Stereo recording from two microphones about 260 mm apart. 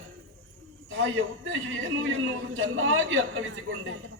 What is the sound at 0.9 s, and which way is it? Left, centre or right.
A man's voice, right.